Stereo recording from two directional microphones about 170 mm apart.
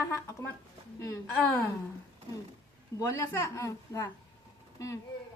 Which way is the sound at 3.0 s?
15° left (ahead or behind).